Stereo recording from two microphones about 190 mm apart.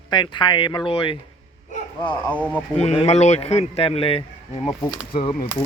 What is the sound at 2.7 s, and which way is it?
Speech, 35° left (ahead or behind).